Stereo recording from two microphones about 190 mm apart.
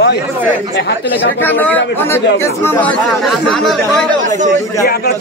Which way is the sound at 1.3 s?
10° left (ahead or behind).